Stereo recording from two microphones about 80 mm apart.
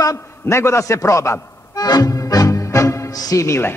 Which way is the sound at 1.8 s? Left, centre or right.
Left.